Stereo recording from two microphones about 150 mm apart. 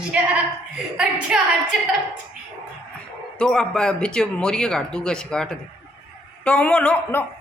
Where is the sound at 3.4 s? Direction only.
5° left (ahead or behind).